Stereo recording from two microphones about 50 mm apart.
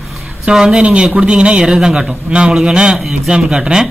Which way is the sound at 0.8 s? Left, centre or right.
Right.